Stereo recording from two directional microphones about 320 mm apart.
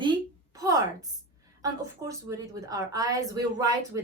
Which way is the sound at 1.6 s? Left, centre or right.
Centre.